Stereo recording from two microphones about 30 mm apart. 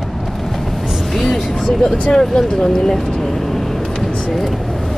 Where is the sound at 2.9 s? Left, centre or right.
Centre.